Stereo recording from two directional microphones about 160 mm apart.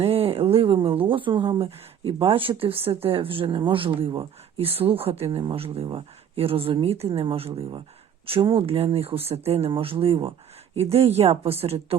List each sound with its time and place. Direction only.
0.0 s speech: 40° right (ahead or behind)